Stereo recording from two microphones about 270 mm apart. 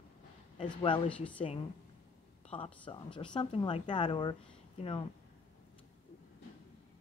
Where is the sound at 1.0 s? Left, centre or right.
Centre.